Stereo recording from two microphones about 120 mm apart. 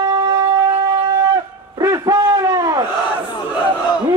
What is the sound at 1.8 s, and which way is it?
Hoot, 30° right (ahead or behind).